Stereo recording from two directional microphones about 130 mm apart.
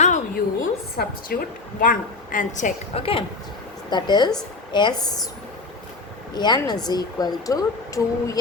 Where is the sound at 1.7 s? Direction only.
90° left.